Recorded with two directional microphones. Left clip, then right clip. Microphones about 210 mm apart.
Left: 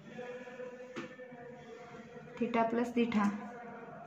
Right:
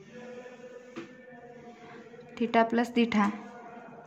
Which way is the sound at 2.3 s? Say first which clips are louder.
Right 7 dB; 50° right (ahead or behind).